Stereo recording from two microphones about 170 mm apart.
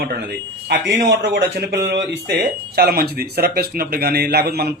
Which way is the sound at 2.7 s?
65° right (ahead or behind).